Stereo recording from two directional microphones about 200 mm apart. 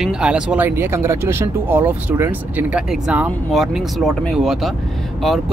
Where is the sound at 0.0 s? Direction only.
5° right (ahead or behind).